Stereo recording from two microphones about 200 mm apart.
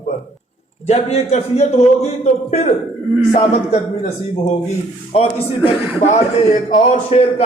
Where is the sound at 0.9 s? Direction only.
35° left (ahead or behind).